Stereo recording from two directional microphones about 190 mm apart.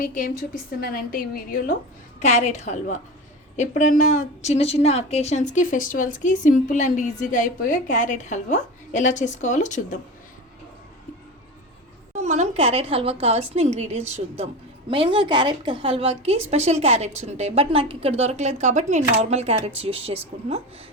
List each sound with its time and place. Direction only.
0.0 s a woman's voice: 45° left (ahead or behind)
2.1 s a woman's voice: 40° left (ahead or behind)
12.1 s a woman's voice: 35° right (ahead or behind)